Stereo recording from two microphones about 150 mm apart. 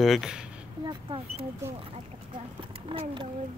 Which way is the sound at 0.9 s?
35° right (ahead or behind).